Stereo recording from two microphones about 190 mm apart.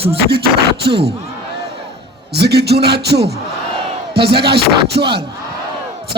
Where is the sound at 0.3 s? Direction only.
55° right (ahead or behind).